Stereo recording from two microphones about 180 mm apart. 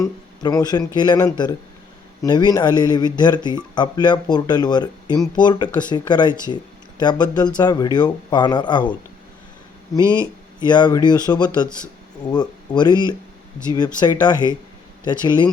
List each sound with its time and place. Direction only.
0.0 s speech: 20° left (ahead or behind)
10.0 s speech: 15° right (ahead or behind)
10.7 s speech: 25° left (ahead or behind)